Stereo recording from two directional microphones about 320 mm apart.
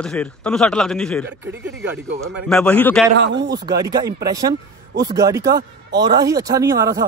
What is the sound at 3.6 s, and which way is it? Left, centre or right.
Speech, centre.